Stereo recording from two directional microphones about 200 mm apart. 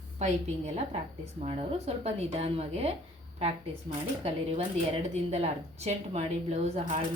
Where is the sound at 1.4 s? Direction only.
30° right (ahead or behind).